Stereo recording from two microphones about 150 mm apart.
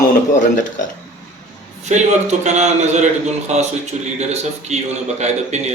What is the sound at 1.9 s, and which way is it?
A man's voice, 50° right (ahead or behind).